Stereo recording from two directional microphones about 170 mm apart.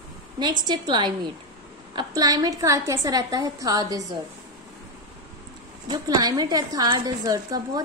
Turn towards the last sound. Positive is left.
turn(degrees=-20)  # may be behind; listen again after turning